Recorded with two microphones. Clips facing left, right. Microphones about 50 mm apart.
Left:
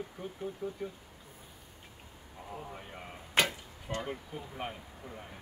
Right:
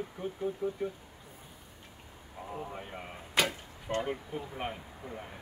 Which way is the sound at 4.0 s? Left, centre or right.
Centre.